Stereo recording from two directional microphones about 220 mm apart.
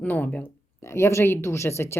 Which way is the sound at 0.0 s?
5° left (ahead or behind).